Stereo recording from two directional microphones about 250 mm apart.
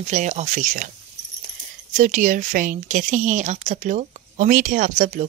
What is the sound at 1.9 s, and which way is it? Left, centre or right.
Speech, right.